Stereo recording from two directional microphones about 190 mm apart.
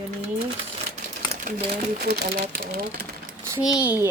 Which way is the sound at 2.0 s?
55° right (ahead or behind).